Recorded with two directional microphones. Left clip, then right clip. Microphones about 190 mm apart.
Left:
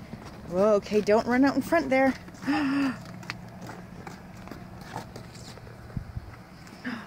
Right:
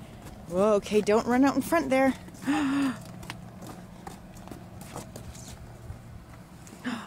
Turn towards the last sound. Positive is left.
turn(degrees=-15)  # may be behind; listen again after turning